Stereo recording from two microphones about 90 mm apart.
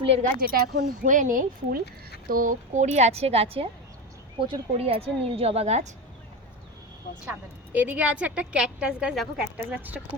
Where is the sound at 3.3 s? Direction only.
90° right.